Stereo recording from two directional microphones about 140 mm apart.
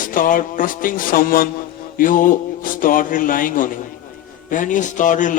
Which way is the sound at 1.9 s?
75° left (ahead or behind).